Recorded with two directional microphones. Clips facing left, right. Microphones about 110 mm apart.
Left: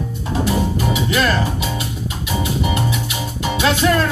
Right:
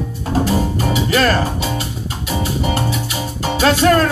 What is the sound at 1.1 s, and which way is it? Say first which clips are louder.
Music: right 3 dB; 40° right (ahead or behind).